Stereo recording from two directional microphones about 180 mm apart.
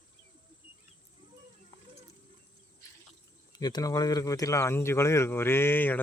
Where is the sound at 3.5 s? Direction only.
25° left (ahead or behind).